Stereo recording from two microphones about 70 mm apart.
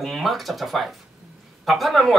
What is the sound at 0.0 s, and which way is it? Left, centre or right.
Speech, centre.